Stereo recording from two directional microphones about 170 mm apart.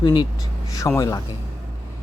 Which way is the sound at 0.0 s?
25° left (ahead or behind).